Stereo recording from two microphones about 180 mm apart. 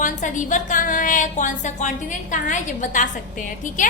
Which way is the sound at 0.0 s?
45° left (ahead or behind).